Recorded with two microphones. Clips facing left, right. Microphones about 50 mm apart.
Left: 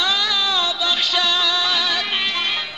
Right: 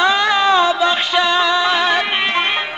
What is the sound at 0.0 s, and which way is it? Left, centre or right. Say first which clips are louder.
Music: right 7 dB; right.